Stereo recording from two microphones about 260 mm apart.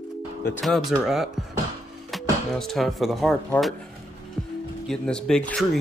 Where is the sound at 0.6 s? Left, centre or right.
Centre.